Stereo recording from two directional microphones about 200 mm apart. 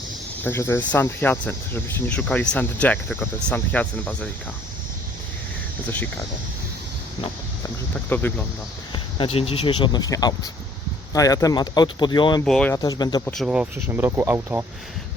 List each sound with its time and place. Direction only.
0.4 s speech: 10° left (ahead or behind)
8.1 s speech: 10° left (ahead or behind)
8.9 s speech: 25° left (ahead or behind)
12.5 s speech: 5° left (ahead or behind)
12.7 s speech: 20° left (ahead or behind)
13.2 s speech: centre (ahead or behind)